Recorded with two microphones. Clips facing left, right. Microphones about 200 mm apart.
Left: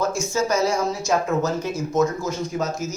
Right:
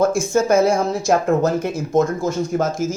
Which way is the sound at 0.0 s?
55° right (ahead or behind).